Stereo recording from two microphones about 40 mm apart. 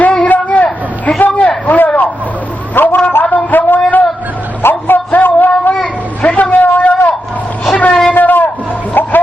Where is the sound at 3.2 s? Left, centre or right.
Left.